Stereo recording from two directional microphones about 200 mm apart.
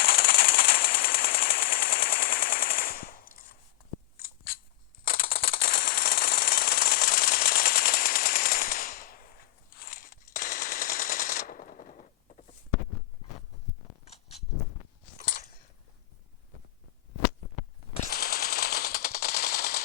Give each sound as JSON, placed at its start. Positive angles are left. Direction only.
{"t": 0.0, "sound": "a sound", "side_deg": 50}
{"t": 4.2, "sound": "scissors", "side_deg": 50}
{"t": 5.0, "sound": "jackhammer", "side_deg": 50}
{"t": 10.3, "sound": "machine gun", "side_deg": 45}
{"t": 14.0, "sound": "a sound", "side_deg": 30}
{"t": 18.1, "sound": "machine gun", "side_deg": 50}